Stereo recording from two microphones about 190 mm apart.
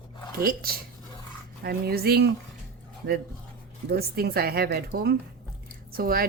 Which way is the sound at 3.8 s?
55° right (ahead or behind).